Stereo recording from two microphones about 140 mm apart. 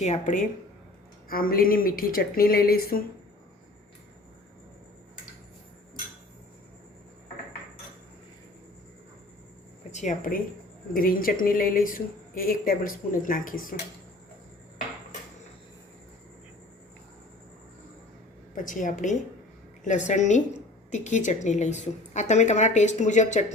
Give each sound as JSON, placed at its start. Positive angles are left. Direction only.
{"t": 0.0, "sound": "a woman's voice", "side_deg": 60}
{"t": 1.3, "sound": "a woman's voice", "side_deg": 90}
{"t": 9.9, "sound": "speech", "side_deg": 60}
{"t": 10.9, "sound": "a woman's voice", "side_deg": 90}
{"t": 18.5, "sound": "a woman's voice", "side_deg": 70}